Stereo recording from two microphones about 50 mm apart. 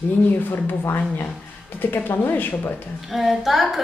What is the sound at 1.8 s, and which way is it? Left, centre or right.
Speech, left.